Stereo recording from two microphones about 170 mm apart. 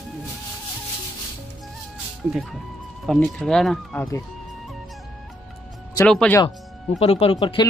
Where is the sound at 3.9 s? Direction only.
15° left (ahead or behind).